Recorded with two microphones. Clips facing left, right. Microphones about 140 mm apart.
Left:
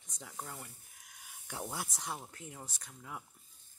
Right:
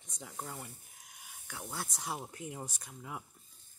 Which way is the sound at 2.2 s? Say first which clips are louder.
Right 6 dB; 15° right (ahead or behind).